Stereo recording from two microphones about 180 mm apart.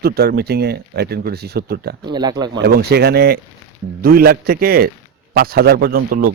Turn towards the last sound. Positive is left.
turn(degrees=-55)  # may be behind; listen again after turning